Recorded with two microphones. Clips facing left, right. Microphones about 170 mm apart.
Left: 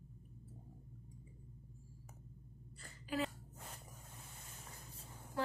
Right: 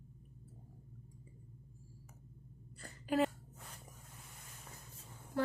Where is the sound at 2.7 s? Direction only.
50° right (ahead or behind).